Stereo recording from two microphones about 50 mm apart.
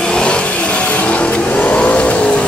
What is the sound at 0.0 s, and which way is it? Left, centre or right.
Vehicle, centre.